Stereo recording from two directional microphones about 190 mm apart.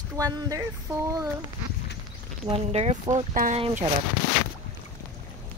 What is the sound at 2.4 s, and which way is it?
Speech, 35° right (ahead or behind).